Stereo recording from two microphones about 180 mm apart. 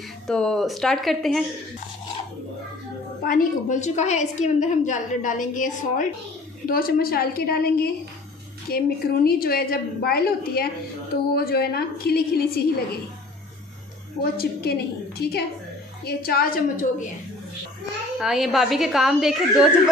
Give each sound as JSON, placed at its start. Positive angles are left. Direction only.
{"t": 0.3, "sound": "a woman's voice", "side_deg": 5}
{"t": 3.3, "sound": "a woman's voice", "side_deg": 45}
{"t": 14.3, "sound": "a woman's voice", "side_deg": 60}
{"t": 18.2, "sound": "a woman's voice", "side_deg": 0}